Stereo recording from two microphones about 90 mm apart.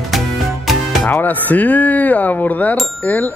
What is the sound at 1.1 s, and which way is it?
Speech, 20° left (ahead or behind).